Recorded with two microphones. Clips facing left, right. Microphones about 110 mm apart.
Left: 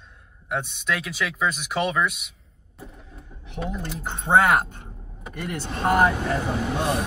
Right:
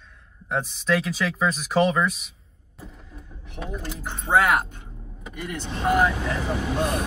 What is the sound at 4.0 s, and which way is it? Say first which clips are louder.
Speech: left 2 dB; 25° left (ahead or behind).